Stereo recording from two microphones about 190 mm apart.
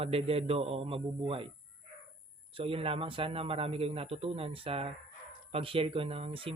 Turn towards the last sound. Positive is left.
turn(degrees=-30)  # may be behind; listen again after turning